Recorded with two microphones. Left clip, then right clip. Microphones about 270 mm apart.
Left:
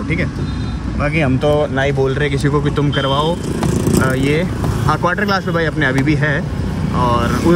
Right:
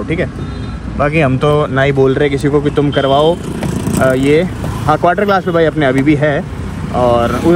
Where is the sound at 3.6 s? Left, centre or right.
Right.